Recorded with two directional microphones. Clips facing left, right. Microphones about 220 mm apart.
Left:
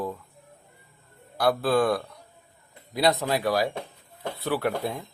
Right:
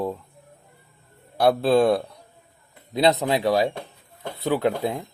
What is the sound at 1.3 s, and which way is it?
Speech, 25° right (ahead or behind).